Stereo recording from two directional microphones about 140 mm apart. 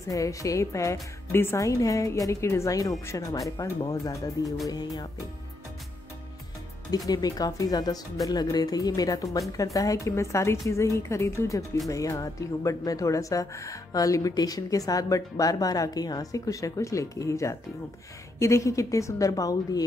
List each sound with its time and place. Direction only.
0.0 s speech: 25° left (ahead or behind)
6.9 s speech: 25° left (ahead or behind)